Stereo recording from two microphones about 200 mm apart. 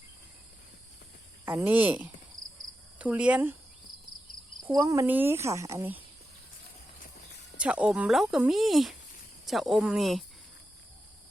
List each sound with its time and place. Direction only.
1.5 s speech: 10° right (ahead or behind)
4.7 s speech: 15° right (ahead or behind)
7.6 s speech: 5° right (ahead or behind)